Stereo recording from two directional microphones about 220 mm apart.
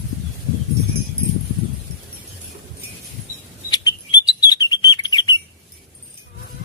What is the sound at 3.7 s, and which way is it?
Chirp, 20° left (ahead or behind).